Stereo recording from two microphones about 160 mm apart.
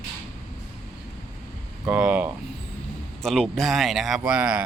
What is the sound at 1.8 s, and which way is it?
Speech, 10° right (ahead or behind).